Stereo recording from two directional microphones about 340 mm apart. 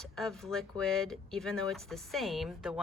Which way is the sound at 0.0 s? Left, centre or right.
Centre.